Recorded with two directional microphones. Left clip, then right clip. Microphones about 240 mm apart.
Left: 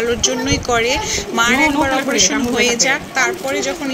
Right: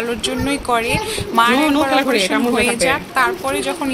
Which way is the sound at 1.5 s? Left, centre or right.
Right.